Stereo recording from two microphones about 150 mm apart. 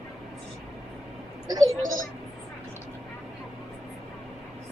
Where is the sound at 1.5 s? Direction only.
25° right (ahead or behind).